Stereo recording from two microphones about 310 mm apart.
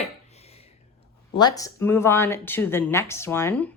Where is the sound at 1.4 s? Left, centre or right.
Centre.